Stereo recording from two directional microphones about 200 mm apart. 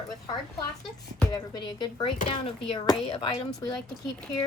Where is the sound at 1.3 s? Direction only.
20° left (ahead or behind).